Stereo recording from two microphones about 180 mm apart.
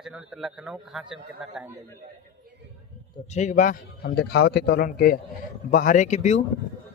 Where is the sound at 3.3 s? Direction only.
40° left (ahead or behind).